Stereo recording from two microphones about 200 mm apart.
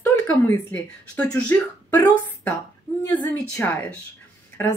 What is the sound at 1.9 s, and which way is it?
A woman's voice, 20° left (ahead or behind).